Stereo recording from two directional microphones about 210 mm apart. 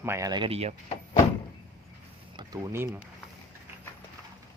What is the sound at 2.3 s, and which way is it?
Speech, 15° right (ahead or behind).